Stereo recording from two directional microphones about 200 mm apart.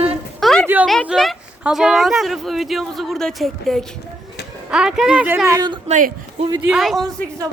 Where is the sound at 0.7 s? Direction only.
10° right (ahead or behind).